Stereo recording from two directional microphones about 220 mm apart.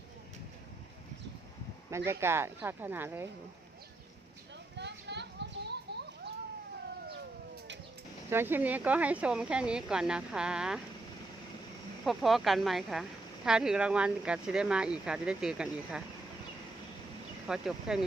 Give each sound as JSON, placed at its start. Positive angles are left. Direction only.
{"t": 1.9, "sound": "speech", "side_deg": -10}
{"t": 4.8, "sound": "children playing", "side_deg": -50}
{"t": 8.3, "sound": "speech", "side_deg": -10}
{"t": 12.0, "sound": "speech", "side_deg": 0}
{"t": 17.4, "sound": "speech", "side_deg": -5}